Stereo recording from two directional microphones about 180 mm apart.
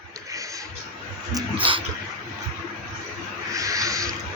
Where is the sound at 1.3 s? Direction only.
30° right (ahead or behind).